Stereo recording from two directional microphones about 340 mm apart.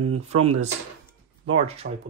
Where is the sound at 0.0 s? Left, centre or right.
Right.